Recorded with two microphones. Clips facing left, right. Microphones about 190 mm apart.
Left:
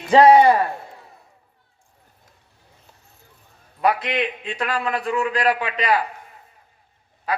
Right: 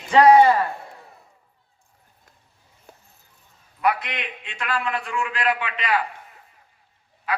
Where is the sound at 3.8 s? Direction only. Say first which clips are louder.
Left 3 dB; 30° left (ahead or behind).